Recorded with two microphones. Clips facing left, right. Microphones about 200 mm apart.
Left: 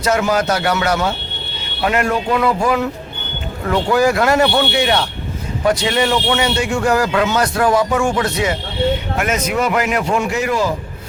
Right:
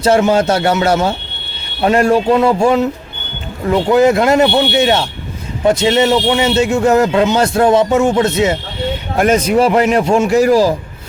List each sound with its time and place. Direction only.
0.0 s a man's voice: 30° right (ahead or behind)